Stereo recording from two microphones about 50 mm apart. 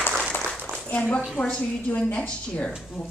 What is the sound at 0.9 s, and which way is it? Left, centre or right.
A woman's voice, left.